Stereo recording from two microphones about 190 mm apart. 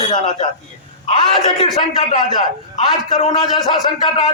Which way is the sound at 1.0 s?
30° left (ahead or behind).